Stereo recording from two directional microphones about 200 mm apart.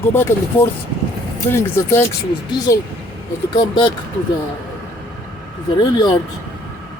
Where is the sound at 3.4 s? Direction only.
25° left (ahead or behind).